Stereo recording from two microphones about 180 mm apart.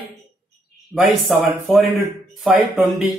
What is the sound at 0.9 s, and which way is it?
Speech, centre (ahead or behind).